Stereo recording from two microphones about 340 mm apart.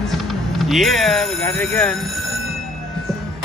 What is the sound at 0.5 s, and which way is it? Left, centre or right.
Speech, centre.